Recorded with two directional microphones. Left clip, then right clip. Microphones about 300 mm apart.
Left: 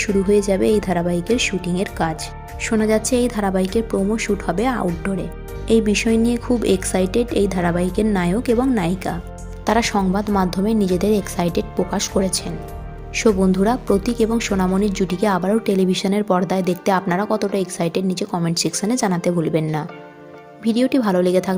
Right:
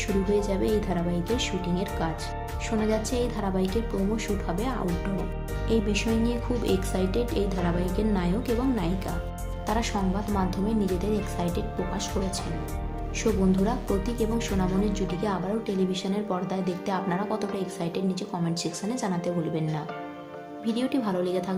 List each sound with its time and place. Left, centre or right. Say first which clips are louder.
0.0 s a woman's voice: left 9 dB; left